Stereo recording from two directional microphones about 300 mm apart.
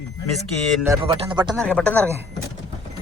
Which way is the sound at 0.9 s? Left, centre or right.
Centre.